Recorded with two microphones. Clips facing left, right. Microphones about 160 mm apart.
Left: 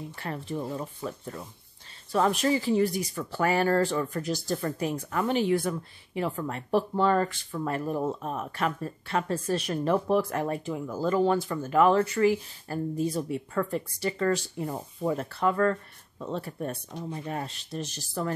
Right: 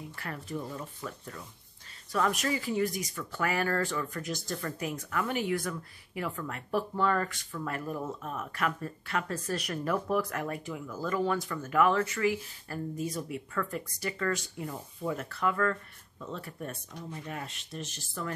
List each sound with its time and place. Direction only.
0.1 s speech: 25° left (ahead or behind)